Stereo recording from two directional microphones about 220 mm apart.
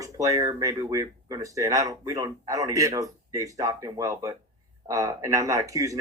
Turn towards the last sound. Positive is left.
turn(degrees=-15)  # may be behind; listen again after turning